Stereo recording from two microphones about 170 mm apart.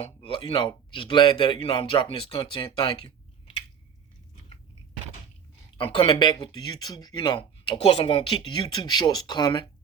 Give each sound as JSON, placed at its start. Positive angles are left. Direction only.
{"t": 0.0, "sound": "a man's voice", "side_deg": 30}
{"t": 5.7, "sound": "speech", "side_deg": 30}